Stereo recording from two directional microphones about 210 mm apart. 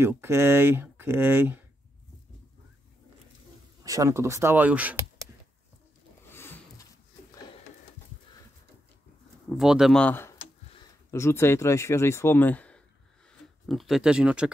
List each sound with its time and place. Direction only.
0.0 s speech: 10° right (ahead or behind)
3.8 s speech: 15° right (ahead or behind)
6.2 s a sound: 10° left (ahead or behind)
9.6 s speech: centre (ahead or behind)